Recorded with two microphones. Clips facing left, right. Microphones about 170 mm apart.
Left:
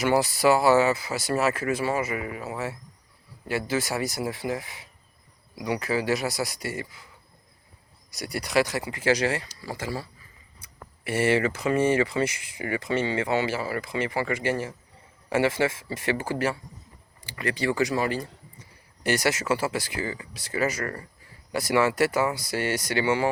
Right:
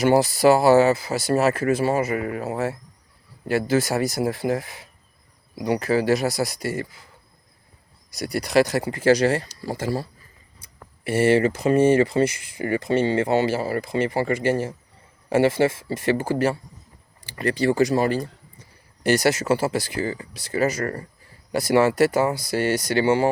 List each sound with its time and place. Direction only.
0.0 s speech: 35° right (ahead or behind)
8.1 s speech: 40° right (ahead or behind)